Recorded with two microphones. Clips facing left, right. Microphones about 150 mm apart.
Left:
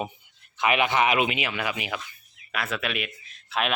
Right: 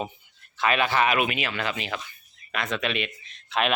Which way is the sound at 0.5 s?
20° left (ahead or behind).